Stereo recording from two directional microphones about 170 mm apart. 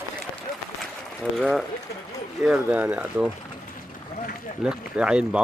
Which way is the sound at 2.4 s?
5° right (ahead or behind).